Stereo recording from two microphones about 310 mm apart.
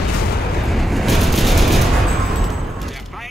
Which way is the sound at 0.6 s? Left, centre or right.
Centre.